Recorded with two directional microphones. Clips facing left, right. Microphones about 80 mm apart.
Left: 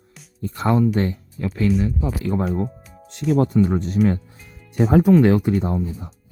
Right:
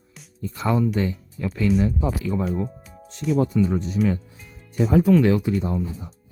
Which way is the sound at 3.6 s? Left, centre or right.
Left.